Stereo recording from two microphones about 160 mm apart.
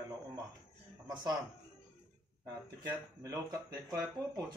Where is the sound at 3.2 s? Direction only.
20° right (ahead or behind).